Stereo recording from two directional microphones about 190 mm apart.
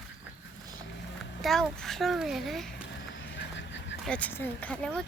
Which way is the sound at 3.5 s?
70° left (ahead or behind).